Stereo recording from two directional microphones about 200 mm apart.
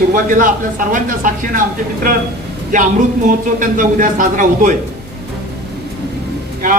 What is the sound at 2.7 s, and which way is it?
Speech, 40° right (ahead or behind).